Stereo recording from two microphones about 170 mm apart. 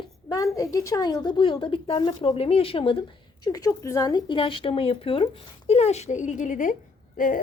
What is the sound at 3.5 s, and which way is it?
A woman's voice, 20° left (ahead or behind).